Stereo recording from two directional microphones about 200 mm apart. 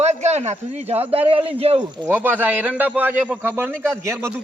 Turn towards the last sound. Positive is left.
turn(degrees=-15)  # may be behind; listen again after turning